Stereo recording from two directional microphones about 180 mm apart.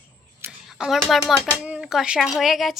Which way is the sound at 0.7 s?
Centre (ahead or behind).